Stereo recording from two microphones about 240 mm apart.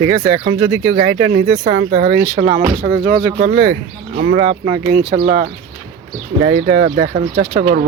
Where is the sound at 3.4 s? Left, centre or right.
Right.